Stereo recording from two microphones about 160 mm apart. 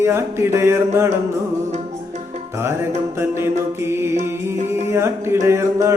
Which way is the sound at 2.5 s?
15° right (ahead or behind).